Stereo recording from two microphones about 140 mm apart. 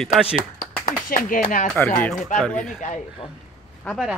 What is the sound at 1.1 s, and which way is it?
Speech, 75° left (ahead or behind).